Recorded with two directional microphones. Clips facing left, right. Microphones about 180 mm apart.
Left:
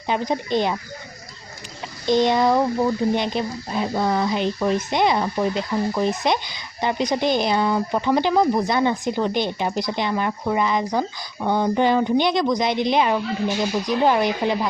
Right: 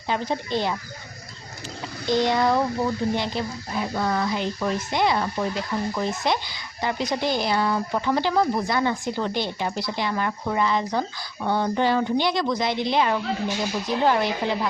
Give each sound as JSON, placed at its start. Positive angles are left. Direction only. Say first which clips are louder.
{"t": 0.1, "sound": "a woman's voice", "louder": "left 3 dB", "side_deg": 20}
{"t": 2.0, "sound": "a woman's voice", "louder": "left 3 dB", "side_deg": 20}